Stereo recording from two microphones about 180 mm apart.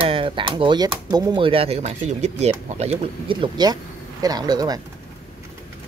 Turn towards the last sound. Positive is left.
turn(degrees=-20)  # may be behind; listen again after turning